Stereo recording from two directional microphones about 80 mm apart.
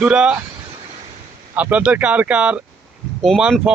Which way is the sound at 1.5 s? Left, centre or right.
Centre.